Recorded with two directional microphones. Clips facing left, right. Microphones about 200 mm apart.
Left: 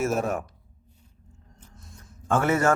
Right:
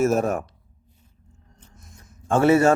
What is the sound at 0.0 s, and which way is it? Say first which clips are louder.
Speech: right 5 dB; 45° right (ahead or behind).